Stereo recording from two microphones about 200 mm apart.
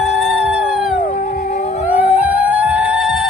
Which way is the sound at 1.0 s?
40° left (ahead or behind).